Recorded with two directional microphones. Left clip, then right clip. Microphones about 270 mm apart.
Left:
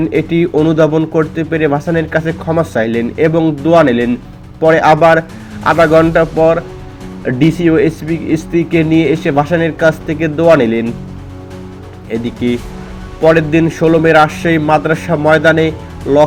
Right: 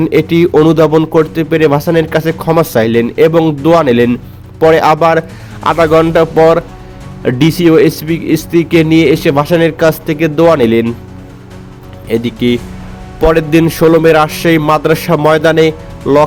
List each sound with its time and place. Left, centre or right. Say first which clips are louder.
0.0 s speech: right 4 dB; right
12.0 s speech: right 4 dB; right